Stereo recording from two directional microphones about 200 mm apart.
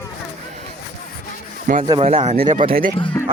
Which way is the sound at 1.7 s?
40° right (ahead or behind).